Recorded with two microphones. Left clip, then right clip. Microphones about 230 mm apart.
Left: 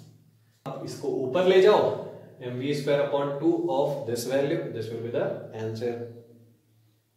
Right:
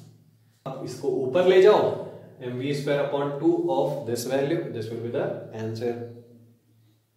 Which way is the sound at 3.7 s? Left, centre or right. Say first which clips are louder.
Right 1 dB; centre.